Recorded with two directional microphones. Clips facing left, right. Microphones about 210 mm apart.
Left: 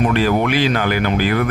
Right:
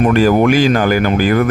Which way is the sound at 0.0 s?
45° right (ahead or behind).